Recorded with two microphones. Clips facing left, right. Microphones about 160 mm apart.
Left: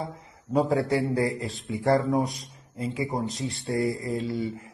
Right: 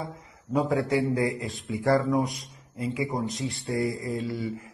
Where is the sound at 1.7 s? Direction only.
20° left (ahead or behind).